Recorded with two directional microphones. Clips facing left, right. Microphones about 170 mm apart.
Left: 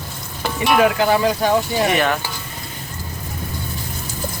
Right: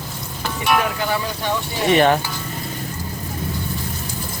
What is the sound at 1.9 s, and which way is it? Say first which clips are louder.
Stir: right 4 dB; 30° right (ahead or behind).